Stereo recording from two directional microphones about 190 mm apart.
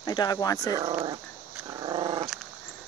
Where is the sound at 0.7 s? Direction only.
20° right (ahead or behind).